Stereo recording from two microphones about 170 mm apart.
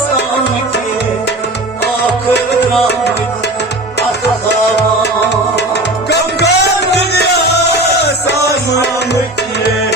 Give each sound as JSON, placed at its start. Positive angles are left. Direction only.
{"t": 5.3, "sound": "music", "side_deg": 85}